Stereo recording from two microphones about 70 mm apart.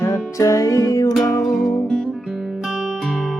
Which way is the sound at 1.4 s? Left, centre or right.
Centre.